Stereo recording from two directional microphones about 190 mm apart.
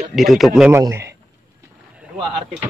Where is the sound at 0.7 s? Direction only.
15° right (ahead or behind).